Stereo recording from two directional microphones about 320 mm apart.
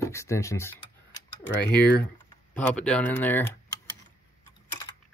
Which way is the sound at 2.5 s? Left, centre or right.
Centre.